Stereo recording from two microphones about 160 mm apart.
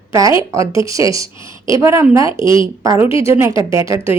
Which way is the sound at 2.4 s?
30° left (ahead or behind).